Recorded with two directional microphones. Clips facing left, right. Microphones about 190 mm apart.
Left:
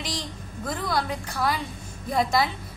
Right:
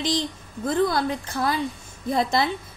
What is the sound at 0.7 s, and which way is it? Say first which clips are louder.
Speech: right 6 dB; 25° right (ahead or behind).